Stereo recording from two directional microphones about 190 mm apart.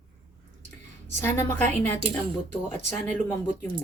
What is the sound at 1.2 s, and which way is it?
Speech, 10° left (ahead or behind).